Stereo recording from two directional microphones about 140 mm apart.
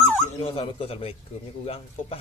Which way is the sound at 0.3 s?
40° left (ahead or behind).